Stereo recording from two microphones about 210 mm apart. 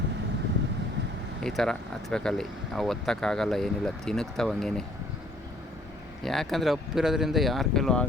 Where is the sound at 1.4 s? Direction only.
Centre (ahead or behind).